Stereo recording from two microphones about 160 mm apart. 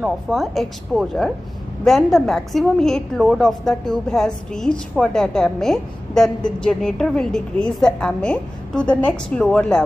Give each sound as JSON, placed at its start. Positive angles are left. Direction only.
{"t": 0.0, "sound": "a woman's voice", "side_deg": 0}